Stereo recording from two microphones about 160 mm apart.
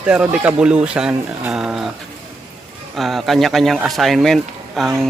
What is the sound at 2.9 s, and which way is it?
Speech, centre (ahead or behind).